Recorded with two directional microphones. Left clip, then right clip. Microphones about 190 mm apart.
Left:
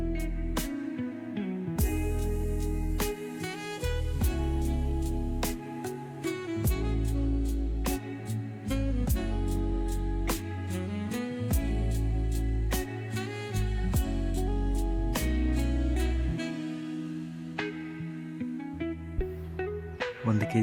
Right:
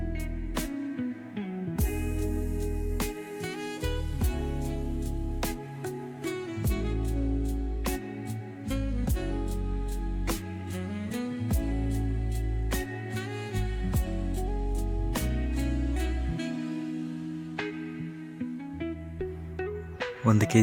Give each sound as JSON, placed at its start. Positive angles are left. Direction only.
{"t": 1.9, "sound": "music", "side_deg": 0}
{"t": 8.7, "sound": "music", "side_deg": 0}
{"t": 10.8, "sound": "music", "side_deg": 0}
{"t": 15.1, "sound": "music", "side_deg": 0}
{"t": 19.5, "sound": "music", "side_deg": 0}
{"t": 20.2, "sound": "music", "side_deg": -25}